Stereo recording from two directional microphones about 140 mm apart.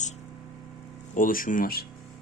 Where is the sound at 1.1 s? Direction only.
80° left.